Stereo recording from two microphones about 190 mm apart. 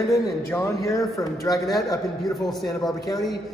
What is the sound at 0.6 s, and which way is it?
A man's voice, 15° left (ahead or behind).